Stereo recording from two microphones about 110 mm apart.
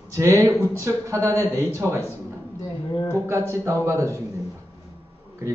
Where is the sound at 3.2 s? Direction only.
25° right (ahead or behind).